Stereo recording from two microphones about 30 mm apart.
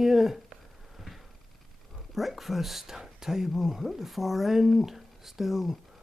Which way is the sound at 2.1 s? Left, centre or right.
Centre.